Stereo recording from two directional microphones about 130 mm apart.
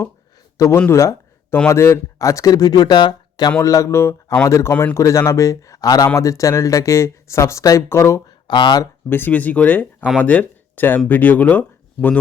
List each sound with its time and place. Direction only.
0.5 s speech: 25° left (ahead or behind)
0.8 s a sound: 20° left (ahead or behind)
1.5 s speech: 20° left (ahead or behind)
8.4 s speech: 35° left (ahead or behind)
9.0 s speech: 15° left (ahead or behind)